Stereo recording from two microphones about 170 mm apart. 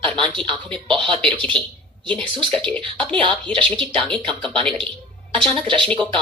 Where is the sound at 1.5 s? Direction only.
5° left (ahead or behind).